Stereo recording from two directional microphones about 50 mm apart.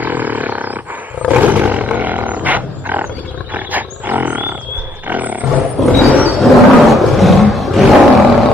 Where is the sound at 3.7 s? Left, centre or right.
Right.